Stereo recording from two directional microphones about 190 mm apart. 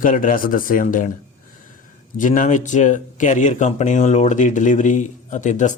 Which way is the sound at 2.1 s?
45° left (ahead or behind).